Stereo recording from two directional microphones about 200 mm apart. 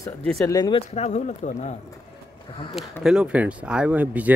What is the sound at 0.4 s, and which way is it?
Speech, 15° left (ahead or behind).